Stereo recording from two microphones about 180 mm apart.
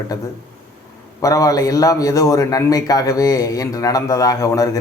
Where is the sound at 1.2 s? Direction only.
20° left (ahead or behind).